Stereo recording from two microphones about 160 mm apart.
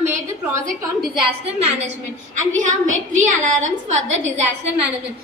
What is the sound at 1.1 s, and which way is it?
A woman's voice, 40° right (ahead or behind).